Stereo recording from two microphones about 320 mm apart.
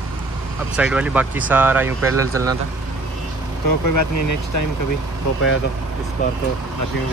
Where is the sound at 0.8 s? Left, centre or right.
Centre.